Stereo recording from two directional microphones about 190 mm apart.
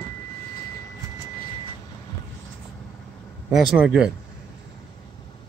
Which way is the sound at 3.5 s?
5° right (ahead or behind).